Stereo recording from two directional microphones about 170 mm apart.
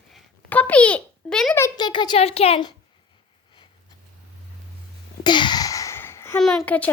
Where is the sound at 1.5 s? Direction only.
20° left (ahead or behind).